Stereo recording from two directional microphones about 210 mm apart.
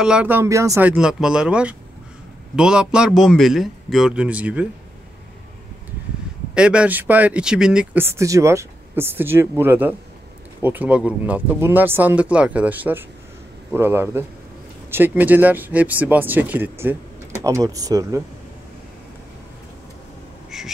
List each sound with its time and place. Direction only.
0.0 s a man's voice: 5° right (ahead or behind)
6.5 s speech: 5° right (ahead or behind)
20.5 s a sound: centre (ahead or behind)